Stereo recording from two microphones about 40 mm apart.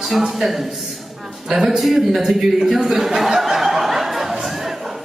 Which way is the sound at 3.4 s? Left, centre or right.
Centre.